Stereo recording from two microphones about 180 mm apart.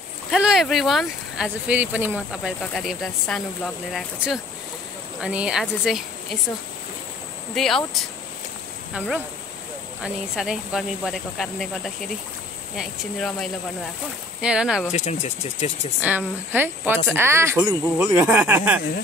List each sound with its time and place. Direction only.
0.3 s speech: centre (ahead or behind)
2.6 s speech: centre (ahead or behind)
7.5 s speech: centre (ahead or behind)
10.0 s speech: 5° right (ahead or behind)
14.9 s speech: 40° left (ahead or behind)
16.0 s speech: 10° right (ahead or behind)